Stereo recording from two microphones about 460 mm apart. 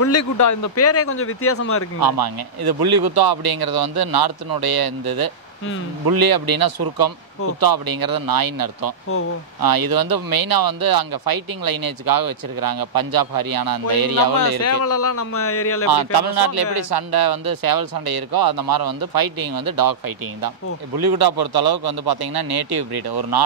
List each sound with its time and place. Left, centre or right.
0.0 s speech: left
2.0 s speech: right
14.6 s speech: left
15.9 s speech: right